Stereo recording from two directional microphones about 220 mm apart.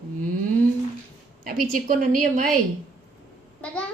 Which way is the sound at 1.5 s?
40° right (ahead or behind).